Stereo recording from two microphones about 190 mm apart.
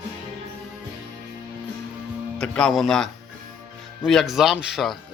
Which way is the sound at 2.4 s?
Centre (ahead or behind).